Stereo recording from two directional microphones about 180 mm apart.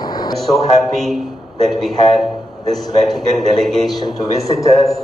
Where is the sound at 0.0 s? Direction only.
20° left (ahead or behind).